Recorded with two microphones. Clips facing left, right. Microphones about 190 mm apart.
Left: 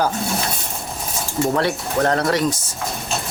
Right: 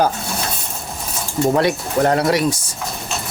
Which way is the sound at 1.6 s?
15° right (ahead or behind).